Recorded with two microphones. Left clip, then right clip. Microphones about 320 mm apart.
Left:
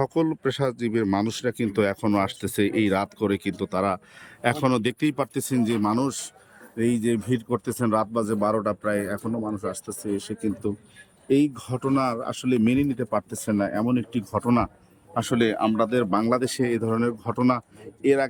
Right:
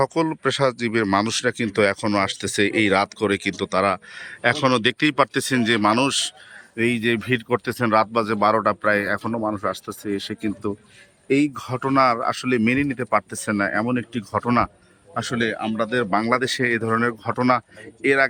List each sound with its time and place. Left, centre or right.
0.0 s speech: centre
7.1 s speech: right
7.4 s speech: right
11.5 s speech: centre